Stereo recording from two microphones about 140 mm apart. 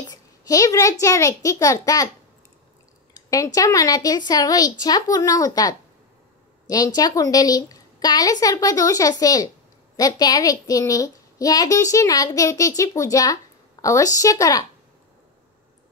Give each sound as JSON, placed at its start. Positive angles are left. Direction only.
{"t": 0.1, "sound": "a child's voice", "side_deg": 25}
{"t": 3.2, "sound": "a child's voice", "side_deg": 25}